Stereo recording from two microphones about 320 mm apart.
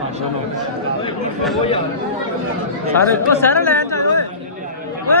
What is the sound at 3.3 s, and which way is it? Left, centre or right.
Speech, centre.